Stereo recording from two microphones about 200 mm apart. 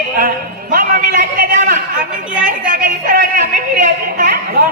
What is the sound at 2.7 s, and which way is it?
A man's voice, 45° right (ahead or behind).